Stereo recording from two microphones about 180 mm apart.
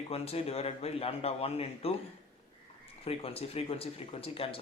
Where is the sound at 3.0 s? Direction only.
35° left (ahead or behind).